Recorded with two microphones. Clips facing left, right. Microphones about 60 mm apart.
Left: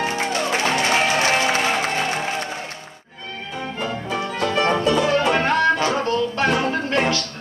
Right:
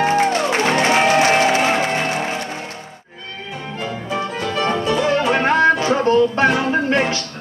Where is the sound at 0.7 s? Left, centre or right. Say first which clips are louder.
Right 6 dB; right.